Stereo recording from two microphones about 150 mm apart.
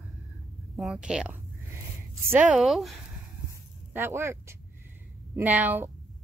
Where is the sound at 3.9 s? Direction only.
15° right (ahead or behind).